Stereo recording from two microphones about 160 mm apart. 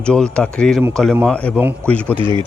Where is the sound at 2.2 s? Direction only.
30° right (ahead or behind).